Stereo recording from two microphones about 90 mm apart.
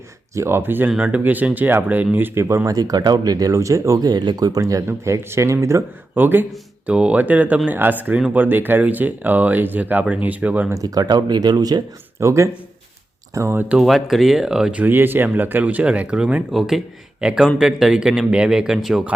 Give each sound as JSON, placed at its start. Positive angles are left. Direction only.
{"t": 0.3, "sound": "speech", "side_deg": -25}
{"t": 6.1, "sound": "speech", "side_deg": -20}
{"t": 10.7, "sound": "speech", "side_deg": -40}
{"t": 12.2, "sound": "speech", "side_deg": -35}
{"t": 13.7, "sound": "speech", "side_deg": 0}